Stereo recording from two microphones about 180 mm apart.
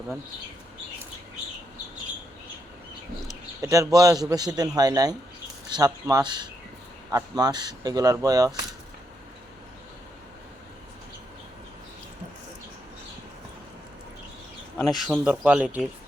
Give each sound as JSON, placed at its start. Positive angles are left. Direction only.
{"t": 3.2, "sound": "a man's voice", "side_deg": -20}
{"t": 14.8, "sound": "speech", "side_deg": 0}